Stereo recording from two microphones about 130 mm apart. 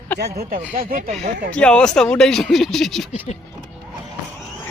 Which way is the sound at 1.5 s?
5° left (ahead or behind).